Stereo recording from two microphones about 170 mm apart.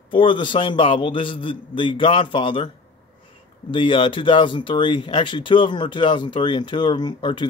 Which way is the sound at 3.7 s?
30° left (ahead or behind).